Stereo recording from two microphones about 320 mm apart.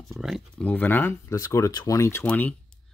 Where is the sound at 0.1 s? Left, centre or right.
Centre.